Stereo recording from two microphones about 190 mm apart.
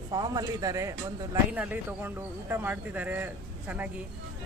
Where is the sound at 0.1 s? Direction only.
20° right (ahead or behind).